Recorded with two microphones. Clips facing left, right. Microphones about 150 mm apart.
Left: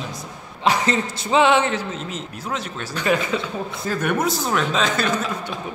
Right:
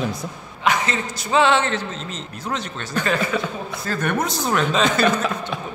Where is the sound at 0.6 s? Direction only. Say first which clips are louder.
Left 2 dB; 35° left (ahead or behind).